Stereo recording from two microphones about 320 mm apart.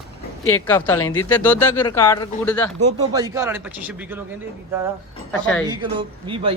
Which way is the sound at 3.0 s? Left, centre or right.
Centre.